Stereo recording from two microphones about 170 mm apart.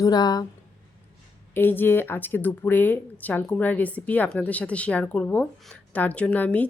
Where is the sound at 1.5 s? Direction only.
10° left (ahead or behind).